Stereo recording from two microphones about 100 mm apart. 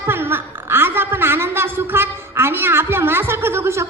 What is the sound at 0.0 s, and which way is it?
A woman's voice, 25° right (ahead or behind).